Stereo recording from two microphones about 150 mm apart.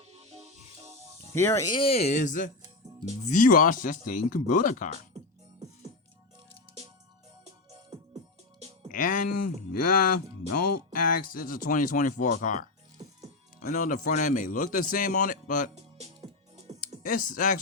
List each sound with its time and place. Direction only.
0.0 s music: 45° right (ahead or behind)
1.3 s speech: 20° left (ahead or behind)
1.6 s speech: 35° left (ahead or behind); by 4.9 s 60° left (ahead or behind)
7.9 s music: 50° right (ahead or behind)
8.9 s speech: 65° left (ahead or behind)
15.7 s music: 45° right (ahead or behind)
17.0 s speech: 65° left (ahead or behind)